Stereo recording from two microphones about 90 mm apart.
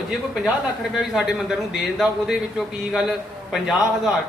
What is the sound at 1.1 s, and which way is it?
Speech, 5° right (ahead or behind).